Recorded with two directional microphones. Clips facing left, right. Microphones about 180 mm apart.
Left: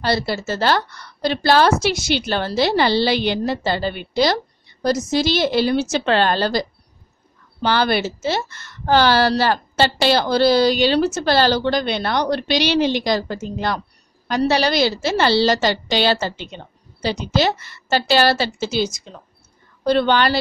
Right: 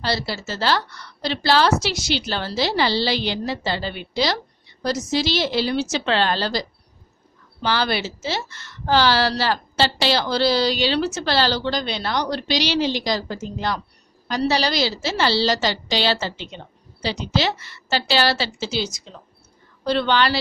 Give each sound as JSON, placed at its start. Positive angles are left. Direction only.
{"t": 0.0, "sound": "a woman's voice", "side_deg": 50}